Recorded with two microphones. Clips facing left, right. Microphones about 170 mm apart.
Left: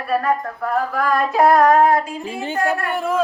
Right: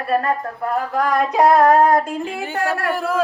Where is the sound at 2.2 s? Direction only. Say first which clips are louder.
Even; centre (ahead or behind).